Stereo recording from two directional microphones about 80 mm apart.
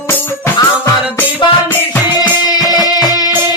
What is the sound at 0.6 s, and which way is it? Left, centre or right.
Music, left.